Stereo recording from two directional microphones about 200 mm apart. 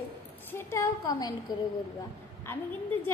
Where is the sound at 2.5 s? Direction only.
10° left (ahead or behind).